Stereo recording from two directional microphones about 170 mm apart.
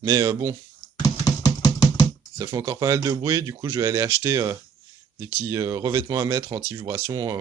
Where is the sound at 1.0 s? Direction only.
25° left (ahead or behind).